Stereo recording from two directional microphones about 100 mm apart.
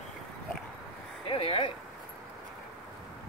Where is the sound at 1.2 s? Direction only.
65° left (ahead or behind).